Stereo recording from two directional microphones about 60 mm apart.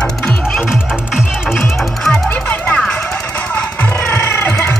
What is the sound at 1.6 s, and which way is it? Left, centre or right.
Music, centre.